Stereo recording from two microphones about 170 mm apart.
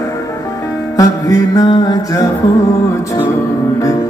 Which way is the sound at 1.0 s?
20° left (ahead or behind).